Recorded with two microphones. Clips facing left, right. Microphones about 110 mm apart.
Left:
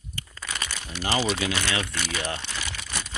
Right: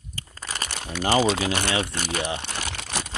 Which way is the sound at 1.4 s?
40° right (ahead or behind).